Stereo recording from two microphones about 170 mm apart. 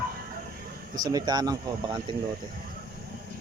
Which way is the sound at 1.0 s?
25° right (ahead or behind).